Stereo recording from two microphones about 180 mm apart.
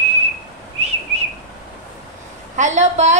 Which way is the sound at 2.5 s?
40° right (ahead or behind).